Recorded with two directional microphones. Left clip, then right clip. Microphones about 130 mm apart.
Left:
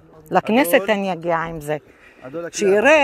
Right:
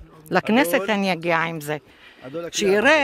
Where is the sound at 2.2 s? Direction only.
Centre (ahead or behind).